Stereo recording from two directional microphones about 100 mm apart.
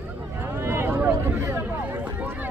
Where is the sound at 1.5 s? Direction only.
20° right (ahead or behind).